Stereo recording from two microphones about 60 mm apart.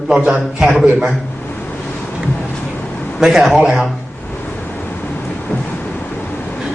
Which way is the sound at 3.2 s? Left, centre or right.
Centre.